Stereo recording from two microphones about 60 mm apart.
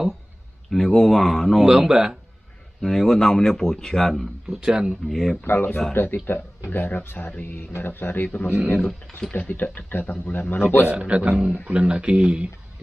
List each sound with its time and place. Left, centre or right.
0.7 s speech: centre
1.7 s speech: centre
2.8 s speech: centre
4.5 s speech: centre
5.0 s speech: centre
5.4 s speech: left
8.7 s speech: centre
9.3 s speech: left
10.9 s speech: right